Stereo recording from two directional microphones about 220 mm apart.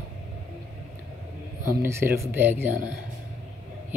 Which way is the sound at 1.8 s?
10° right (ahead or behind).